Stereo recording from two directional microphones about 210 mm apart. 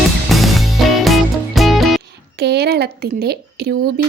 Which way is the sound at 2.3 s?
50° right (ahead or behind).